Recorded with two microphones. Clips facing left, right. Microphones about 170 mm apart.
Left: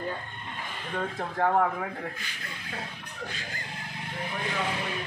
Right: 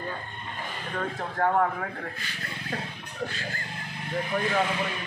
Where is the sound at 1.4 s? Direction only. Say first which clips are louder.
Even; 5° left (ahead or behind).